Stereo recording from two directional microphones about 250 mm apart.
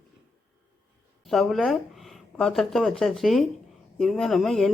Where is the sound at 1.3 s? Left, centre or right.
Centre.